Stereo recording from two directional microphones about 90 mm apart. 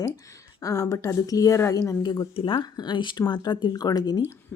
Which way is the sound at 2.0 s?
65° left (ahead or behind).